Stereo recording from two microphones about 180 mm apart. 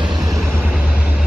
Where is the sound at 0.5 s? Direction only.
5° right (ahead or behind).